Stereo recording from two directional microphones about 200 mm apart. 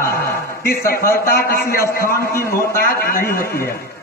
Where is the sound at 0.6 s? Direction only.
45° left (ahead or behind).